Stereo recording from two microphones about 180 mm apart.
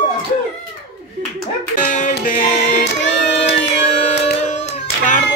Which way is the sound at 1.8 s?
50° left (ahead or behind).